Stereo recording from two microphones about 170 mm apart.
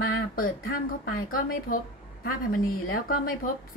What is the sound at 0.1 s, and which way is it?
Speech, 60° left (ahead or behind).